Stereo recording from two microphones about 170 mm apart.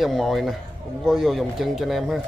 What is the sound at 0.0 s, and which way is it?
Speech, centre (ahead or behind).